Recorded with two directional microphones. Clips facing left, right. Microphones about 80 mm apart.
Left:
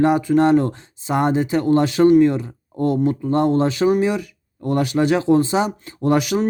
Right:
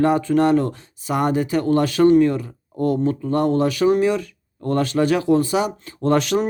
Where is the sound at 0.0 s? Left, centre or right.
Centre.